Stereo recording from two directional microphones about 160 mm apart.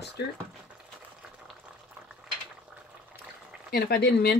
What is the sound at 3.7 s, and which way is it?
Speech, 70° left (ahead or behind).